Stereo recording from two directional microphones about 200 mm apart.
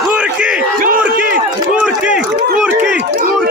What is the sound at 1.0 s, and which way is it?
Run, 5° right (ahead or behind).